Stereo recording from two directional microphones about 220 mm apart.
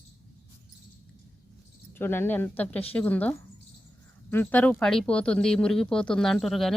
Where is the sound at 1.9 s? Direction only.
10° left (ahead or behind).